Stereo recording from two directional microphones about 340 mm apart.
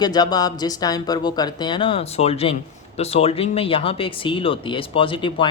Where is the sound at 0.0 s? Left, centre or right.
Centre.